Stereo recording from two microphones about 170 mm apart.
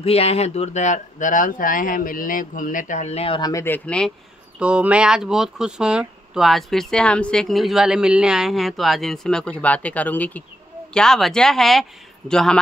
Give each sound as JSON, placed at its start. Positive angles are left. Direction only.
{"t": 0.0, "sound": "speech", "side_deg": 35}
{"t": 3.6, "sound": "speech", "side_deg": 10}
{"t": 4.6, "sound": "speech", "side_deg": -5}